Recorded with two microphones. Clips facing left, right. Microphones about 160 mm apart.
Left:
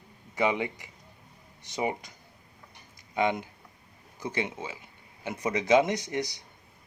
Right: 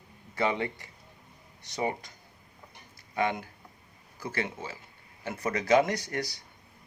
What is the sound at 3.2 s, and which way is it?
Speech, 20° left (ahead or behind).